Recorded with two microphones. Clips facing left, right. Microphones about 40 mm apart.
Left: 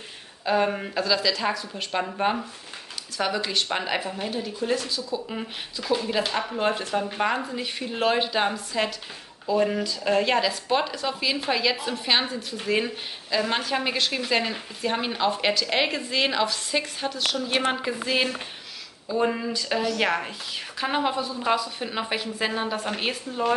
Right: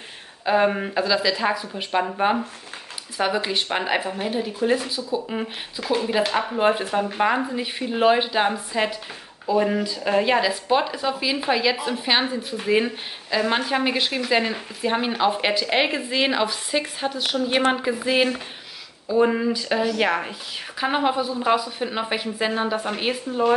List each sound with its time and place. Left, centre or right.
0.5 s a woman's voice: centre
3.2 s speech: right
5.8 s speech: right
6.0 s a woman's voice: centre